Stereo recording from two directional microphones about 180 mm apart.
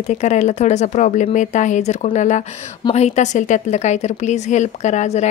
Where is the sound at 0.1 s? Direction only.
40° left (ahead or behind).